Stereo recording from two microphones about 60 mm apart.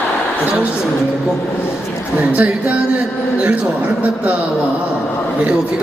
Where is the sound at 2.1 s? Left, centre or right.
Right.